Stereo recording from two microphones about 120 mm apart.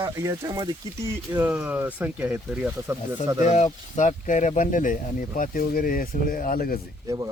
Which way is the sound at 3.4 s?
70° left (ahead or behind).